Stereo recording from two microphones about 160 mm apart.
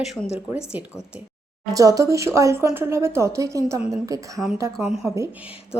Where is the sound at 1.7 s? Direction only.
20° right (ahead or behind).